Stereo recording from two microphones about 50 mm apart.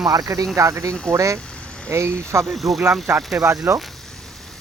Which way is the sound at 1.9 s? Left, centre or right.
Right.